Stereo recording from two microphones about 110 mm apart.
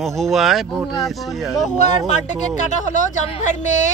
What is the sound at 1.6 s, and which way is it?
Speech, 90° left.